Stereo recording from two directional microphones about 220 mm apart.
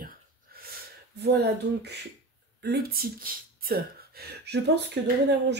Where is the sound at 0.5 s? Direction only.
40° right (ahead or behind).